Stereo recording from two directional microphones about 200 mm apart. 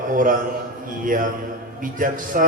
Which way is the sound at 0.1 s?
40° right (ahead or behind).